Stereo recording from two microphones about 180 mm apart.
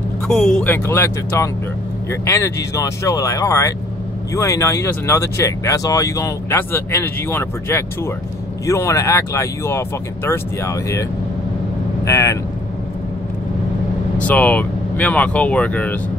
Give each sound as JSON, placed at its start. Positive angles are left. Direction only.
{"t": 0.3, "sound": "speech", "side_deg": 0}
{"t": 0.8, "sound": "speech", "side_deg": 15}
{"t": 14.1, "sound": "speech", "side_deg": 10}